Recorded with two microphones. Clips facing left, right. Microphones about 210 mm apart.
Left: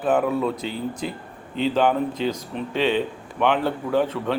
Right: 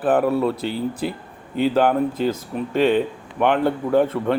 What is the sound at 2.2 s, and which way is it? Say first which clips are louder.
Speech: right 3 dB; 45° right (ahead or behind).